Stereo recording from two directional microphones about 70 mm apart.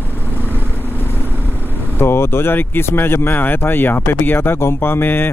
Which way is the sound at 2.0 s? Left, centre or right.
Left.